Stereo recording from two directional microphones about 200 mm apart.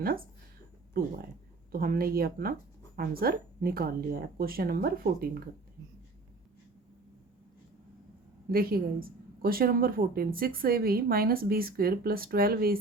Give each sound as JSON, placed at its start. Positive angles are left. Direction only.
{"t": 0.0, "sound": "a woman's voice", "side_deg": -50}
{"t": 1.7, "sound": "a woman's voice", "side_deg": -45}
{"t": 8.4, "sound": "a woman's voice", "side_deg": -50}